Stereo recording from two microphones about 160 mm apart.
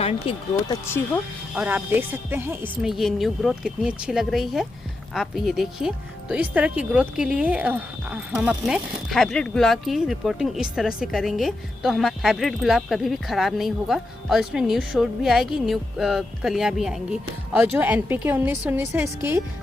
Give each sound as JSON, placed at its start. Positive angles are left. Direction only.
{"t": 0.0, "sound": "speech", "side_deg": 40}
{"t": 0.7, "sound": "speech", "side_deg": 15}
{"t": 1.5, "sound": "speech", "side_deg": -10}
{"t": 2.8, "sound": "speech", "side_deg": 0}